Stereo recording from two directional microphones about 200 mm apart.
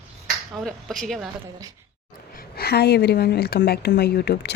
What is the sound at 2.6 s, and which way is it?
A woman's voice, 55° left (ahead or behind).